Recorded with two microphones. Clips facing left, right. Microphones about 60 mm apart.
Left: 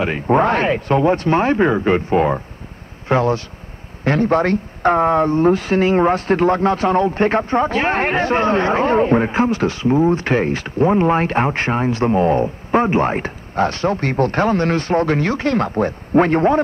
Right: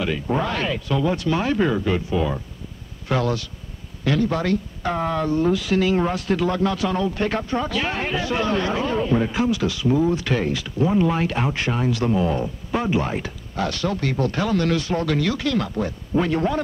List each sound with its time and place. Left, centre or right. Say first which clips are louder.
0.0 s speech: left 7 dB; left
3.1 s speech: left 6 dB; left